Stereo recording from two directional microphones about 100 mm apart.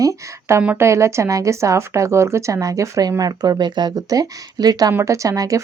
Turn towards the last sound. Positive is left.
turn(degrees=-35)  # may be behind; listen again after turning